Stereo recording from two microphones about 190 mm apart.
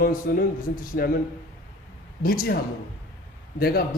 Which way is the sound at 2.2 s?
50° left (ahead or behind).